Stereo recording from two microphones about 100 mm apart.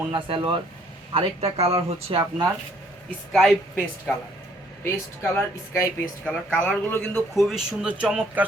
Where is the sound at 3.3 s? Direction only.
Centre (ahead or behind).